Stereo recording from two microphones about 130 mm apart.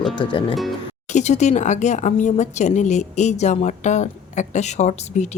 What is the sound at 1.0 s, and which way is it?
Speech, 65° left (ahead or behind).